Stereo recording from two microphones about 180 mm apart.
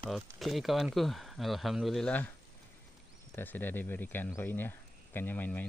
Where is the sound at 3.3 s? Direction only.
10° left (ahead or behind).